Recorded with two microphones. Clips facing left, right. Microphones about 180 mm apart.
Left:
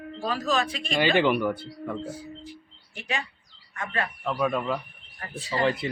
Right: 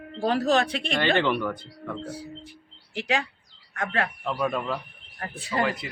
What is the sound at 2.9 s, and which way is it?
Speech, 90° right.